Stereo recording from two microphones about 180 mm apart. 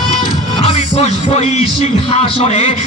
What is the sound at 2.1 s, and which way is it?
Speech, 35° left (ahead or behind).